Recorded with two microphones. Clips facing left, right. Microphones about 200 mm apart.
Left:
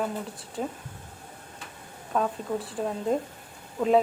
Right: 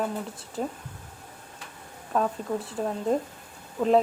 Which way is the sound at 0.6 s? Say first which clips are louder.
Right 1 dB; centre (ahead or behind).